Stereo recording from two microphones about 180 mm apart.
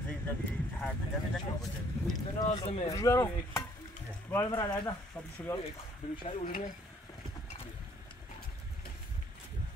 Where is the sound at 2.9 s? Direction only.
15° left (ahead or behind).